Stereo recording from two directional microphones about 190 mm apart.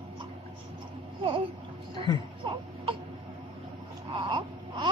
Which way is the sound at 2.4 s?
30° right (ahead or behind).